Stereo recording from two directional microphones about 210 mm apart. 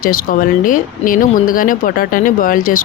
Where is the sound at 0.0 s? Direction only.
40° left (ahead or behind).